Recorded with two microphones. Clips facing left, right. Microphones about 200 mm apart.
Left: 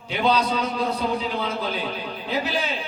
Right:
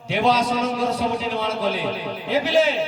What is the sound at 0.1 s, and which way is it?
Music, 90° right.